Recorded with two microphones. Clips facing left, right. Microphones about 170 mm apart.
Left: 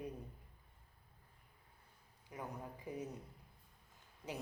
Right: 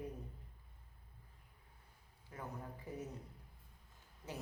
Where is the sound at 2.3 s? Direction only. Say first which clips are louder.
Left 1 dB; 15° left (ahead or behind).